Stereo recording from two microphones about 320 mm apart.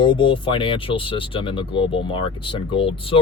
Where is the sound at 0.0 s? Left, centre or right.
Centre.